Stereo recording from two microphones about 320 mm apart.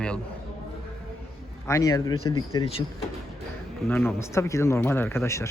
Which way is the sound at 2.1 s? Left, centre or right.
Left.